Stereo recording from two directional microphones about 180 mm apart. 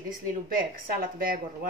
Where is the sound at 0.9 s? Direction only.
55° right (ahead or behind).